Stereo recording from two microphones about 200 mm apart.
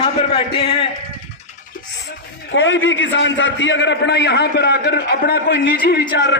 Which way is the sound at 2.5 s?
70° left (ahead or behind).